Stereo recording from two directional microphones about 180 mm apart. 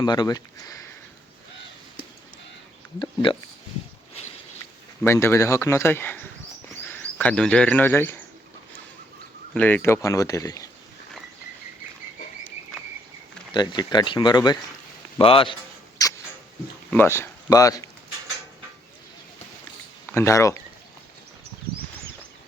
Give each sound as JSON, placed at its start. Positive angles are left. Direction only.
{"t": 0.0, "sound": "speech", "side_deg": 25}
{"t": 3.0, "sound": "speech", "side_deg": 30}
{"t": 5.0, "sound": "speech", "side_deg": 15}
{"t": 9.6, "sound": "speech", "side_deg": 10}
{"t": 13.5, "sound": "a man's voice", "side_deg": 25}
{"t": 16.9, "sound": "speech", "side_deg": 10}
{"t": 20.1, "sound": "speech", "side_deg": 15}